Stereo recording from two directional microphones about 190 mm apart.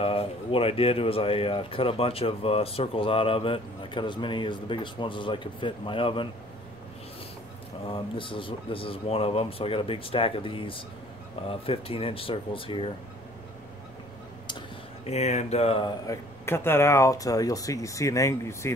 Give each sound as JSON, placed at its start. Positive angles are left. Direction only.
{"t": 0.0, "sound": "speech", "side_deg": 30}
{"t": 7.9, "sound": "speech", "side_deg": 25}
{"t": 15.0, "sound": "speech", "side_deg": 35}
{"t": 16.1, "sound": "speech", "side_deg": 15}